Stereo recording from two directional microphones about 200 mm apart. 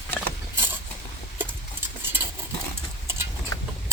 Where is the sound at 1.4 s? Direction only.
10° right (ahead or behind).